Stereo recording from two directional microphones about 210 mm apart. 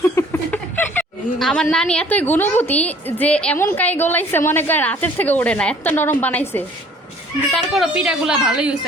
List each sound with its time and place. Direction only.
0.2 s chuckle: 10° left (ahead or behind)
1.7 s a woman's voice: 5° left (ahead or behind)
7.5 s a woman's voice: centre (ahead or behind)